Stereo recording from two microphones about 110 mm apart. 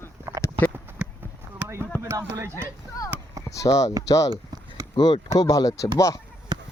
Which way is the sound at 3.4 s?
30° left (ahead or behind).